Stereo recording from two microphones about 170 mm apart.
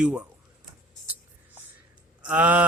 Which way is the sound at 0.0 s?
5° right (ahead or behind).